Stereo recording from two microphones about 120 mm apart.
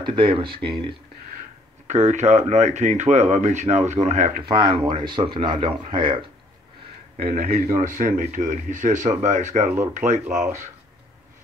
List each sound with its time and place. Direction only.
0.0 s speech: 45° right (ahead or behind)
1.9 s speech: 75° right (ahead or behind)
4.5 s speech: 40° right (ahead or behind)
7.7 s speech: 90° right